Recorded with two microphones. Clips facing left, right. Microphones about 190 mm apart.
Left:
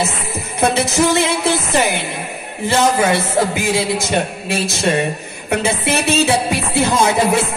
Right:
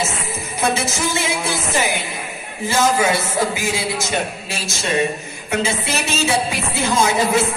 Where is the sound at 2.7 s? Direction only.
60° left (ahead or behind).